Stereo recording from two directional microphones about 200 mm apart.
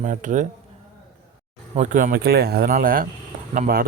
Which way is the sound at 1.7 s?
40° right (ahead or behind).